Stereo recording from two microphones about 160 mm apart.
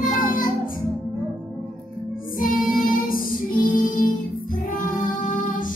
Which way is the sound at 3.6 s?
55° left (ahead or behind).